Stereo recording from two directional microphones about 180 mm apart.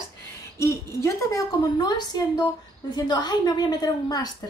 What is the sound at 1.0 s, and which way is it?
A woman's voice, 20° left (ahead or behind).